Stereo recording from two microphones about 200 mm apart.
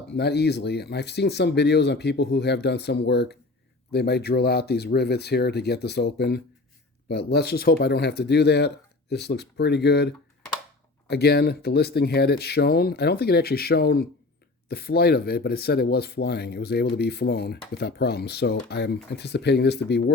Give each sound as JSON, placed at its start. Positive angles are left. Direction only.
{"t": 0.1, "sound": "speech", "side_deg": 55}
{"t": 11.1, "sound": "speech", "side_deg": 55}